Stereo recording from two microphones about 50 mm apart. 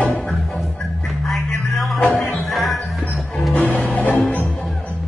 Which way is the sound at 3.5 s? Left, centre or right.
Left.